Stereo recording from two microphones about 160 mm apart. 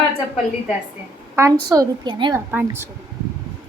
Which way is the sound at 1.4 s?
20° right (ahead or behind).